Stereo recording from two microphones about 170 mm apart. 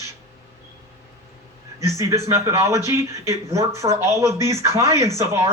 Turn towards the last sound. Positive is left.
turn(degrees=-20)  # may be behind; listen again after turning